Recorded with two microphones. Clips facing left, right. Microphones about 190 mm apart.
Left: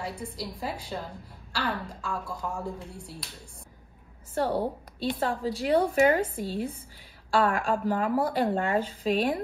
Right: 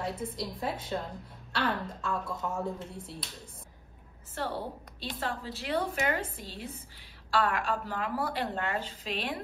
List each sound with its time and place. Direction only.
0.0 s a woman's voice: centre (ahead or behind)
4.4 s speech: 45° left (ahead or behind)